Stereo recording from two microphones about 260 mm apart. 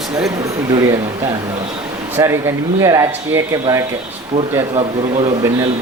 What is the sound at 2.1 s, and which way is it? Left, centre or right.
A man's voice, centre.